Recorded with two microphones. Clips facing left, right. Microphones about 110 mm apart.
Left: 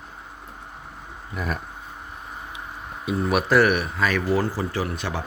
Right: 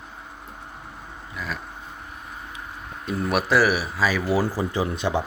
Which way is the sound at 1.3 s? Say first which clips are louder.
Left 4 dB; 50° left (ahead or behind).